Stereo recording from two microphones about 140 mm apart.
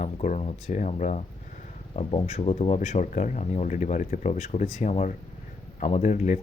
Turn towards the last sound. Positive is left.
turn(degrees=60)  # may be behind; listen again after turning